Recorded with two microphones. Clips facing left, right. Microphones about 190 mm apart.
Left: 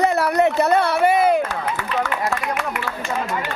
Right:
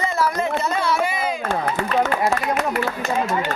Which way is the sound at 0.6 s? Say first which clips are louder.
Left 5 dB; 60° left (ahead or behind).